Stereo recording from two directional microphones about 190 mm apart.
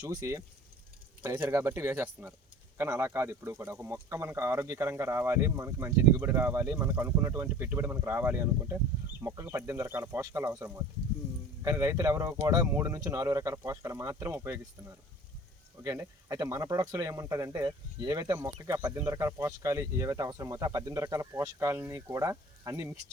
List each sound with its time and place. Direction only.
0.0 s speech: 20° right (ahead or behind)